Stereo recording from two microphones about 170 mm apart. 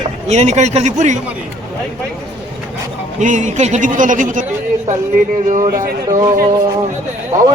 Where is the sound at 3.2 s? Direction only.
45° right (ahead or behind).